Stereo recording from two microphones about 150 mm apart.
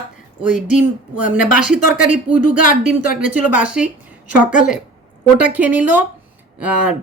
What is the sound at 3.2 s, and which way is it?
Speech, 5° right (ahead or behind).